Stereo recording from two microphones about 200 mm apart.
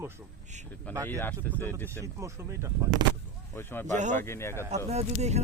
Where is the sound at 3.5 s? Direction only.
10° left (ahead or behind).